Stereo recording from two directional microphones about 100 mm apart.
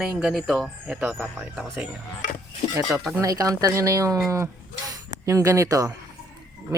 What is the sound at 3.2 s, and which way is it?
Speech, 35° right (ahead or behind).